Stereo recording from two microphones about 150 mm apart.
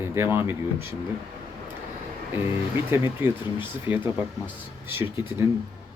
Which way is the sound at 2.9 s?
15° right (ahead or behind).